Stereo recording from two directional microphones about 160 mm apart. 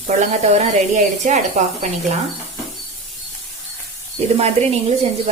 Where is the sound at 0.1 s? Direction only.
45° right (ahead or behind).